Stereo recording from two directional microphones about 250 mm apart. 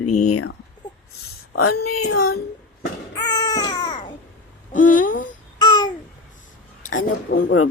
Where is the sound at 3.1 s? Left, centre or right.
Centre.